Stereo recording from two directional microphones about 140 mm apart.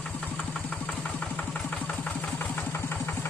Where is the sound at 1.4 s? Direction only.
10° left (ahead or behind).